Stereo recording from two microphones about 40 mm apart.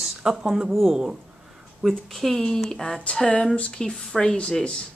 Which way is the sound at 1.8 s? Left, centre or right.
Centre.